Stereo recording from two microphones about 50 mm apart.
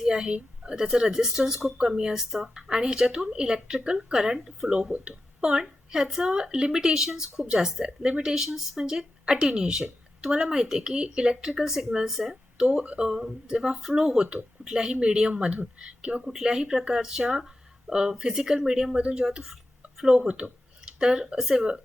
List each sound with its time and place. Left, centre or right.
0.0 s a woman's voice: centre
12.6 s a woman's voice: right